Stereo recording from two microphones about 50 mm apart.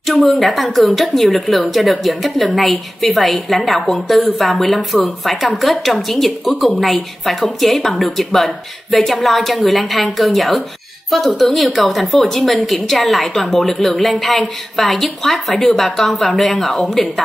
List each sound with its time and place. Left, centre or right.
0.0 s a woman's voice: centre